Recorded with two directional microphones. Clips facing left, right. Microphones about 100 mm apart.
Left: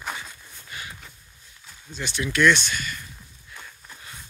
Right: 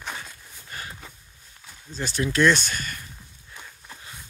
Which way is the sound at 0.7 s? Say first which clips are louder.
Right 1 dB; 45° right (ahead or behind).